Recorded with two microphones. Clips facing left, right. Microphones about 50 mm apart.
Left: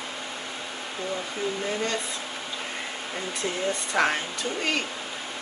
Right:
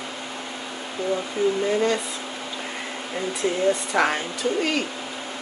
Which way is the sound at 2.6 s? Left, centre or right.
Centre.